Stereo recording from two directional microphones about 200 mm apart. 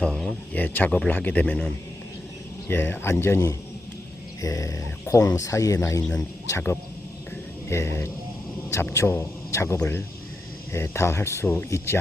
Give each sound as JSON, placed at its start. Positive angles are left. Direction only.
{"t": 0.0, "sound": "speech", "side_deg": 0}